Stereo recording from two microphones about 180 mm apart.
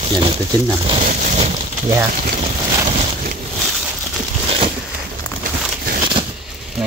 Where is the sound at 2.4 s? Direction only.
35° right (ahead or behind).